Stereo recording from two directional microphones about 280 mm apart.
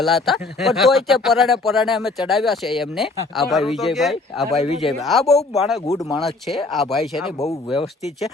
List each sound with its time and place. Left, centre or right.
0.0 s speech: centre
7.3 s speech: centre